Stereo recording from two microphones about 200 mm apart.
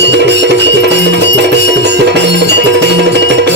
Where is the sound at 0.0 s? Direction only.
60° right (ahead or behind).